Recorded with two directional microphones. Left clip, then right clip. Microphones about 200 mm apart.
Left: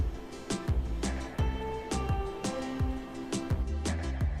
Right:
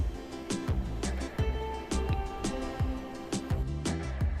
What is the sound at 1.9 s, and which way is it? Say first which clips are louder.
Music: left 1 dB; centre (ahead or behind).